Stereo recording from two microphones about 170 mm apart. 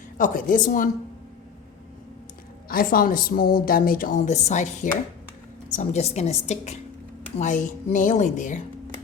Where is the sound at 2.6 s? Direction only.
60° left (ahead or behind).